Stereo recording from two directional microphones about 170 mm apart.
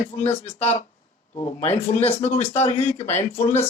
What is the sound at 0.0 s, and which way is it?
Speech, 40° left (ahead or behind).